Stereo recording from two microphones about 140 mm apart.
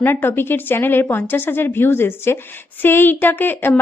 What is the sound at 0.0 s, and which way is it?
A woman's voice, 15° left (ahead or behind).